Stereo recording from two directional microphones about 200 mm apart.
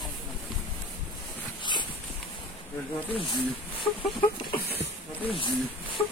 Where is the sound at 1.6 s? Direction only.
25° left (ahead or behind).